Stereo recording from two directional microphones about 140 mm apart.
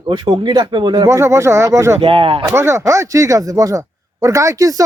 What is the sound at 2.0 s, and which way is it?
Speech, 40° right (ahead or behind).